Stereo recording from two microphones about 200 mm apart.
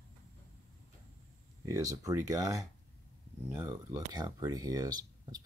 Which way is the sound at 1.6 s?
15° right (ahead or behind).